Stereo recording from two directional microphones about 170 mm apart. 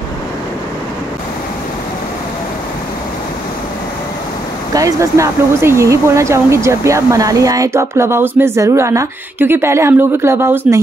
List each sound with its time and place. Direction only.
4.7 s speech: 20° right (ahead or behind)